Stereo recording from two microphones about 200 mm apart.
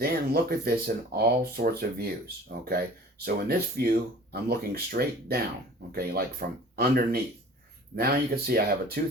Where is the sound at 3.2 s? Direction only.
50° right (ahead or behind).